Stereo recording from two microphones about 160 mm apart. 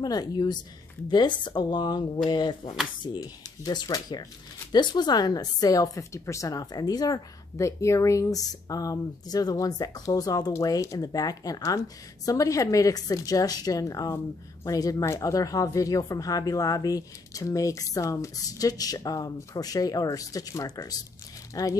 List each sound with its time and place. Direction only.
0.0 s a woman's voice: 25° left (ahead or behind)